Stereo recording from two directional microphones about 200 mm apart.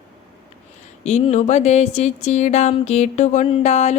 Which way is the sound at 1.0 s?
35° left (ahead or behind).